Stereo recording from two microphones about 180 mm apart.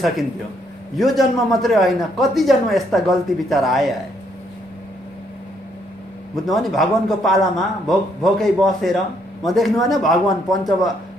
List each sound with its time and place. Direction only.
0.9 s a man's voice: centre (ahead or behind)
6.3 s a man's voice: centre (ahead or behind)